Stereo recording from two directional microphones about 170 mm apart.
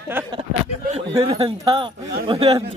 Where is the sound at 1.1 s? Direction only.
35° right (ahead or behind).